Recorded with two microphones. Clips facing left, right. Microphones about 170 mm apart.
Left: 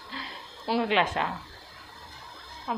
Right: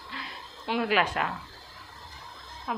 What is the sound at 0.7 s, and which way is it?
Speech, 25° left (ahead or behind).